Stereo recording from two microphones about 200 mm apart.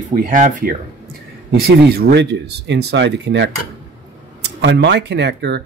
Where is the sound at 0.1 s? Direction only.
45° right (ahead or behind).